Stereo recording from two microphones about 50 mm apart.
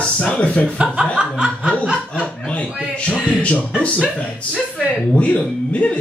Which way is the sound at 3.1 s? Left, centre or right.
Left.